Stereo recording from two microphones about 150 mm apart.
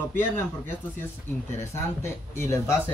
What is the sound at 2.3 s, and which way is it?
Speech, 20° left (ahead or behind).